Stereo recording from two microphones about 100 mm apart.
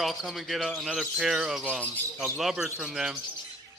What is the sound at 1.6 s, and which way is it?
Speech, 15° right (ahead or behind).